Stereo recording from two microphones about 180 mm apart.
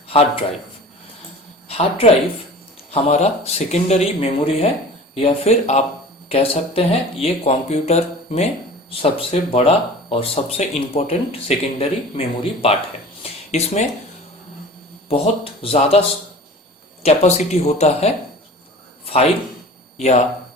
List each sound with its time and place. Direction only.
1.6 s a woman's voice: 35° left (ahead or behind)
15.6 s speech: 35° left (ahead or behind)
17.0 s speech: 35° left (ahead or behind)
19.0 s a sound: 35° left (ahead or behind)
20.0 s speech: 40° left (ahead or behind)